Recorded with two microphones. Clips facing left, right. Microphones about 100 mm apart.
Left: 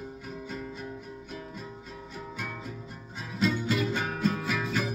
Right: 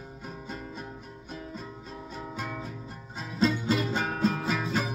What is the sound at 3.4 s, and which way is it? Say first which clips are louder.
Music: right 1 dB; 25° right (ahead or behind).